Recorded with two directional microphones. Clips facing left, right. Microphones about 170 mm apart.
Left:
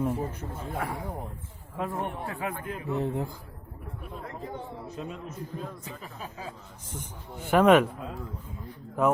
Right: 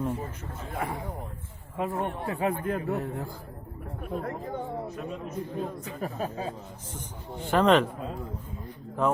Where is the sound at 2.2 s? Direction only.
30° right (ahead or behind).